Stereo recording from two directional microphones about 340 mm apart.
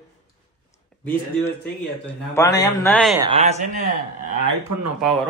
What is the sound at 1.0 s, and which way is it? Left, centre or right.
A man's voice, centre.